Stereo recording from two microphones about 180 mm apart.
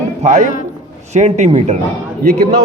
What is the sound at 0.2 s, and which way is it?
A man's voice, 40° right (ahead or behind).